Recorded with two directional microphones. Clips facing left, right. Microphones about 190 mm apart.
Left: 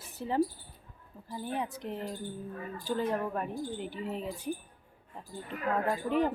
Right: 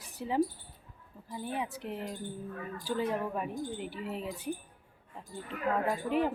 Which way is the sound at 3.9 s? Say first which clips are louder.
Left 1 dB; 40° left (ahead or behind).